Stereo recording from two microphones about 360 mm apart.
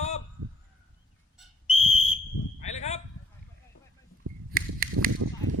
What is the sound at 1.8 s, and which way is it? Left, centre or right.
Whistle, centre.